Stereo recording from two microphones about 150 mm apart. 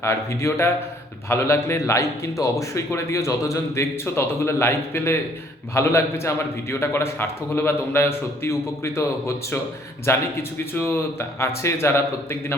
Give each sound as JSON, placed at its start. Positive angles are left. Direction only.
{"t": 0.0, "sound": "a man's voice", "side_deg": 20}